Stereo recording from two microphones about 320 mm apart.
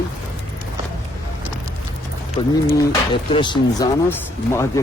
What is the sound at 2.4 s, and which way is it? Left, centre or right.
Speech, centre.